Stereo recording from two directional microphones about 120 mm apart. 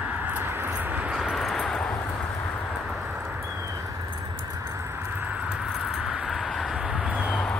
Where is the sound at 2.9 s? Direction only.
5° right (ahead or behind).